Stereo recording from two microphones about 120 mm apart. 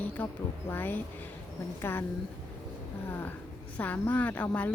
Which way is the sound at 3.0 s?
15° left (ahead or behind).